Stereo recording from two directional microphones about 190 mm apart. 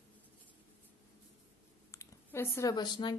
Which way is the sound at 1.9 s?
15° left (ahead or behind).